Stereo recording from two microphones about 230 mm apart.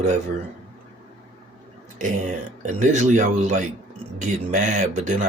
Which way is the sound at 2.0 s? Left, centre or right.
Right.